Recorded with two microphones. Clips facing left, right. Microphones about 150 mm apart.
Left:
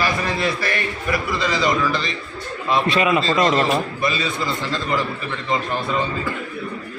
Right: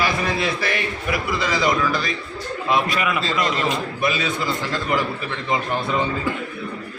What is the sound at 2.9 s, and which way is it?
Speech, 25° left (ahead or behind).